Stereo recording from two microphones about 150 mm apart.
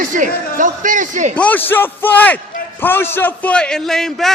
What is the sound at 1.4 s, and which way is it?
A man's voice, 10° left (ahead or behind).